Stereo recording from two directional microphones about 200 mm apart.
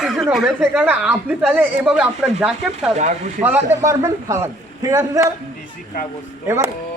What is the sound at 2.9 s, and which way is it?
Speech, 35° right (ahead or behind).